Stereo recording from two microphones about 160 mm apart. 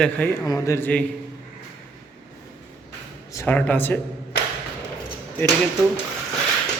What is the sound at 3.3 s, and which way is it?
Speech, 20° left (ahead or behind).